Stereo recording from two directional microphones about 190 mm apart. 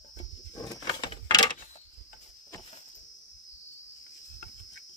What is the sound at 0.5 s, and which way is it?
Keys jangling, 20° left (ahead or behind).